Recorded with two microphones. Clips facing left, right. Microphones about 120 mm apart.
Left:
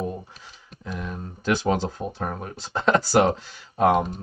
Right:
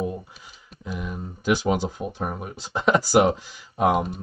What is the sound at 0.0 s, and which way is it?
Speech, 5° right (ahead or behind).